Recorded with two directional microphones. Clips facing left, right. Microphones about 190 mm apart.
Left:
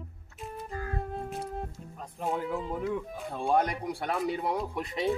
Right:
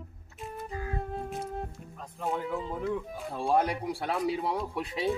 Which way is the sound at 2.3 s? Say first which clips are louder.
Left 1 dB; centre (ahead or behind).